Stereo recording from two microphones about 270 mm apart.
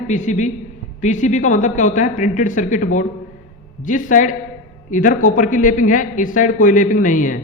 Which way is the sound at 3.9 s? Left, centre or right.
Left.